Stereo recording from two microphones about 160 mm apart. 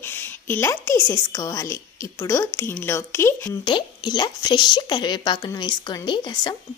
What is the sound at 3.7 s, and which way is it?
A woman's voice, 25° left (ahead or behind).